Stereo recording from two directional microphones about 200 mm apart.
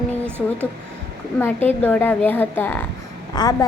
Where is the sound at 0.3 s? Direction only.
10° right (ahead or behind).